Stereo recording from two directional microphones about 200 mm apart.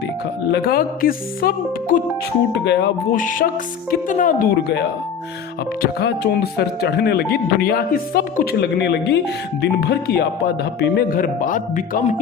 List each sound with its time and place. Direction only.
0.5 s speech: 50° left (ahead or behind)
2.5 s speech: 60° left (ahead or behind)
3.2 s speech: 40° left (ahead or behind)
5.8 s speech: 55° left (ahead or behind)